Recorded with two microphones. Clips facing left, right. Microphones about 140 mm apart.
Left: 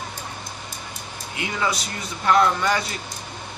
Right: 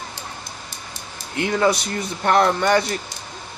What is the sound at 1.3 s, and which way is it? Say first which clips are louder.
Speech: right 7 dB; 50° right (ahead or behind).